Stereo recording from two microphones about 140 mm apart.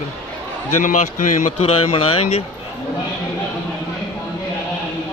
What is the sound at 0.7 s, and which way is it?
Speech, 65° left (ahead or behind).